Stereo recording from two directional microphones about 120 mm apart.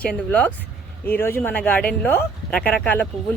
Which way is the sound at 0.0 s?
10° left (ahead or behind).